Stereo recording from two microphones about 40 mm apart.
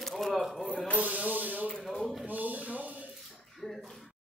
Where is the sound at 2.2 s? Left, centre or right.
Right.